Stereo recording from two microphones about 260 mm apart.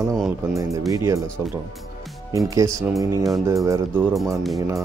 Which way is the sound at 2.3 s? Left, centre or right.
Centre.